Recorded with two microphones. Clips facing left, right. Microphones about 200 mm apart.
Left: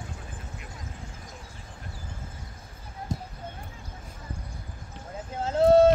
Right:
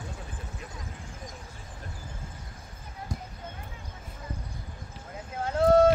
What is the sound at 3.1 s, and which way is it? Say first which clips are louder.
Clip-clop: left 4 dB; 25° left (ahead or behind).